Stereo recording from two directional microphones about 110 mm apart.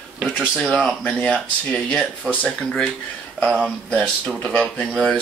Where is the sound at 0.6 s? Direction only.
Centre (ahead or behind).